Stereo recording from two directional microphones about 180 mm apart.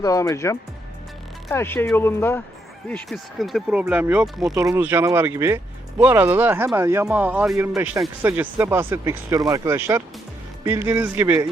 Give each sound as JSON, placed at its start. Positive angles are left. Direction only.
{"t": 0.0, "sound": "speech", "side_deg": 20}
{"t": 2.9, "sound": "speech", "side_deg": 0}